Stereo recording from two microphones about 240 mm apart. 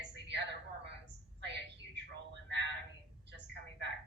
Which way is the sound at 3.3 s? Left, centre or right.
Right.